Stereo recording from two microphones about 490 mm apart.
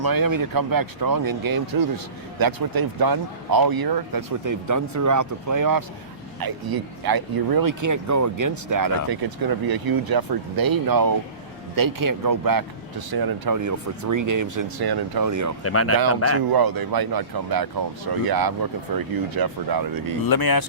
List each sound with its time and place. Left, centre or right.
0.0 s speech: right
15.6 s speech: left
16.5 s speech: right
20.2 s speech: left